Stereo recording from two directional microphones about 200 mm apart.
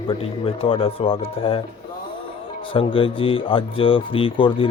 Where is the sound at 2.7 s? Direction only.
25° left (ahead or behind).